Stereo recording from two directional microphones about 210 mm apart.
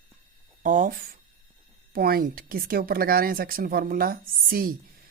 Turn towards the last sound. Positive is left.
turn(degrees=-45)  # may be behind; listen again after turning